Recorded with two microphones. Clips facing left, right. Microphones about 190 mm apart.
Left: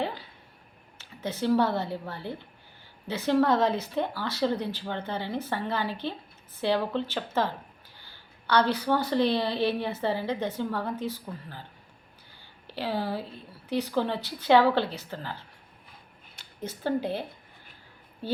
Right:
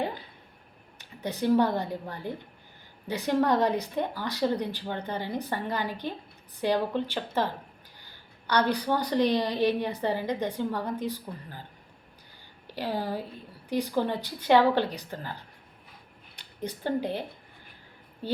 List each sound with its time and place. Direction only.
0.0 s a sound: 20° right (ahead or behind)
0.9 s a woman's voice: 15° right (ahead or behind)
12.6 s a woman's voice: 15° right (ahead or behind)